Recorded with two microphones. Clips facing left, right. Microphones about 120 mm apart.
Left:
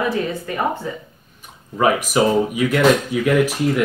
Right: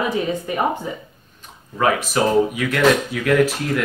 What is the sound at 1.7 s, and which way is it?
Speech, 10° left (ahead or behind).